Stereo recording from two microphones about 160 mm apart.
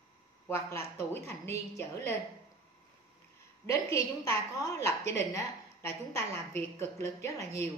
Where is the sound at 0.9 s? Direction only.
15° left (ahead or behind).